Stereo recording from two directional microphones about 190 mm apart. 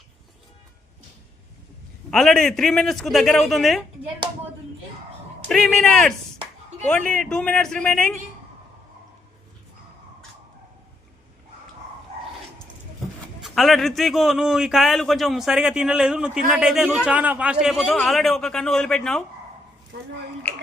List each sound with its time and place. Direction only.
2.0 s a man's voice: 5° left (ahead or behind)
5.5 s a man's voice: 5° left (ahead or behind)
13.4 s a man's voice: centre (ahead or behind)
19.9 s a woman's voice: 70° right (ahead or behind)